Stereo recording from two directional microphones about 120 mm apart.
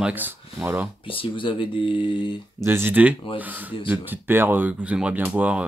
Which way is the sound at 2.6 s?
20° right (ahead or behind).